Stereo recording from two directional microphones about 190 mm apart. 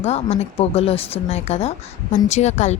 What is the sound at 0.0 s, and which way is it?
A woman's voice, 35° left (ahead or behind).